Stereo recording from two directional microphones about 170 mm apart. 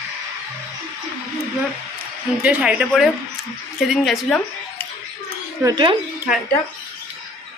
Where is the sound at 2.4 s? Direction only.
10° right (ahead or behind).